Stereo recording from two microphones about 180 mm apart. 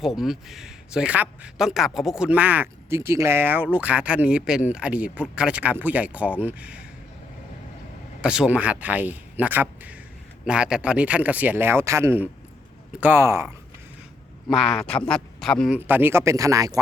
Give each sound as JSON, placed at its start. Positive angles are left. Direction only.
{"t": 0.0, "sound": "a man's voice", "side_deg": 0}
{"t": 8.2, "sound": "a man's voice", "side_deg": -5}
{"t": 14.4, "sound": "a man's voice", "side_deg": 0}
{"t": 15.8, "sound": "a man's voice", "side_deg": -10}